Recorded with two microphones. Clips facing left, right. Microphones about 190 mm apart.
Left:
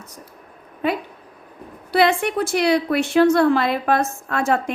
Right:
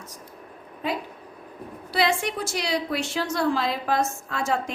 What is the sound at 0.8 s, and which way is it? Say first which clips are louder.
A woman's voice: left 6 dB; 60° left (ahead or behind).